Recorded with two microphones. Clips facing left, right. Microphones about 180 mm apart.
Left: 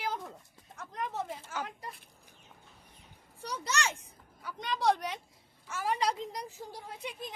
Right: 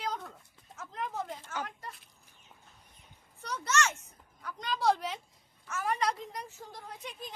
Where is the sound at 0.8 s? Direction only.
Centre (ahead or behind).